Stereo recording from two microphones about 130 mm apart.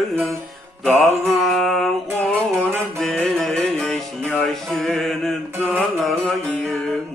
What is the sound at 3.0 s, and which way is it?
Music, 5° left (ahead or behind).